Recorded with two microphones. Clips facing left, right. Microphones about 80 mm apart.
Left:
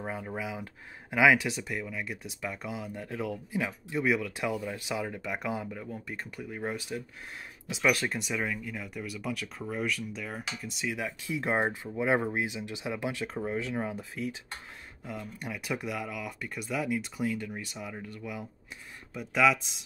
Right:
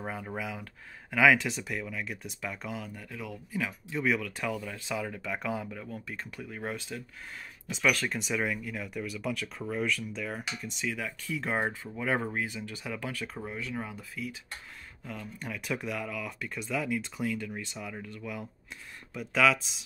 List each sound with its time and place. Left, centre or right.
0.0 s speech: centre
3.0 s speech: left
3.9 s speech: centre
8.2 s speech: centre
10.9 s speech: centre
15.0 s speech: centre